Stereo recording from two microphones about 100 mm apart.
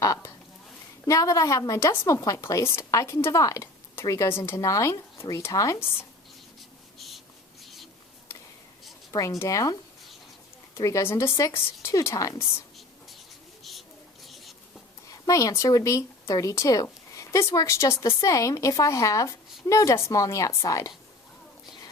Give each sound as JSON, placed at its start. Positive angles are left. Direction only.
{"t": 0.0, "sound": "speech", "side_deg": 35}
{"t": 6.6, "sound": "a sound", "side_deg": 0}
{"t": 9.4, "sound": "speech", "side_deg": 35}
{"t": 10.8, "sound": "speech", "side_deg": 35}
{"t": 14.3, "sound": "writing", "side_deg": 0}
{"t": 15.0, "sound": "speech", "side_deg": 35}